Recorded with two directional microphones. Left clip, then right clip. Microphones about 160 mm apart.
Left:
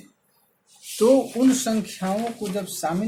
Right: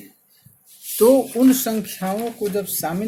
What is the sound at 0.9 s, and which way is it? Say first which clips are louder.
Speech: right 3 dB; 45° right (ahead or behind).